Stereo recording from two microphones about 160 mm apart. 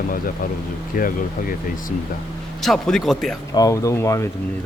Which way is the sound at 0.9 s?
60° left (ahead or behind).